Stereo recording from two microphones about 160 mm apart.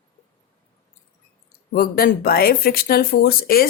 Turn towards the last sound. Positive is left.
turn(degrees=70)  # may be behind; listen again after turning